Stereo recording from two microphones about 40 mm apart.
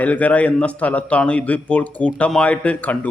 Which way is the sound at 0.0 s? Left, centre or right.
Left.